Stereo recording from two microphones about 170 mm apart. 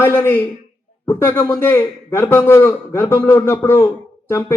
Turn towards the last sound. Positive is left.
turn(degrees=15)  # may be behind; listen again after turning